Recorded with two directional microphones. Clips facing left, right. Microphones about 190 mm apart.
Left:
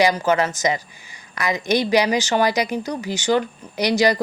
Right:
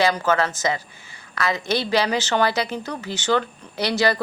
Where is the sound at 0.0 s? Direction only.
15° left (ahead or behind).